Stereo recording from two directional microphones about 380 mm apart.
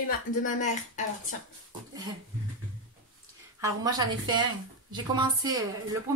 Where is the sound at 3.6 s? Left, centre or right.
Centre.